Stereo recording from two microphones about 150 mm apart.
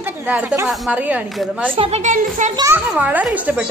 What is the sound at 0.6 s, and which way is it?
Speech, centre (ahead or behind).